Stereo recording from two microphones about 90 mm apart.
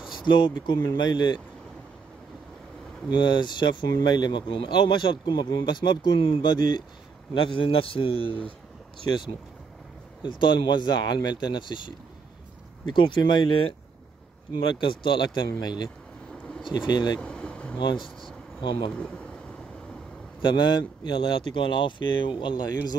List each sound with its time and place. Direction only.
0.2 s speech: 55° left (ahead or behind)
3.1 s speech: 55° left (ahead or behind)
7.4 s a man's voice: 75° left (ahead or behind)
10.2 s speech: 60° left (ahead or behind)
17.2 s a sound: 10° left (ahead or behind)
18.6 s speech: 60° left (ahead or behind)
18.9 s speech: 15° left (ahead or behind)
20.4 s speech: 55° left (ahead or behind)